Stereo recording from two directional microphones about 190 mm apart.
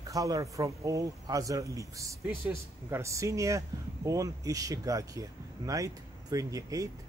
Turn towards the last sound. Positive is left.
turn(degrees=-20)  # may be behind; listen again after turning